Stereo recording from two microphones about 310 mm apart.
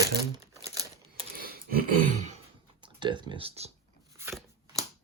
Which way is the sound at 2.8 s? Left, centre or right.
Centre.